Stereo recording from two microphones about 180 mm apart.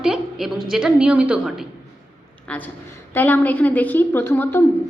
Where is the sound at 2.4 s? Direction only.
10° left (ahead or behind).